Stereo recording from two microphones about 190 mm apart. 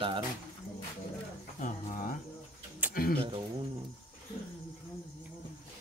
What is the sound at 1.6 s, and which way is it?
Speech, 45° left (ahead or behind).